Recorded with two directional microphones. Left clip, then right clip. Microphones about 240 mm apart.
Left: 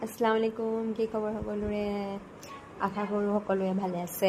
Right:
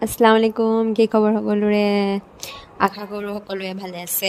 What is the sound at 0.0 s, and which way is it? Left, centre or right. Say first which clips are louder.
A woman's voice: right 12 dB; right.